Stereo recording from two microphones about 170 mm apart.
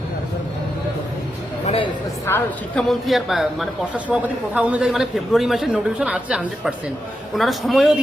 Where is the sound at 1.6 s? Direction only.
35° left (ahead or behind).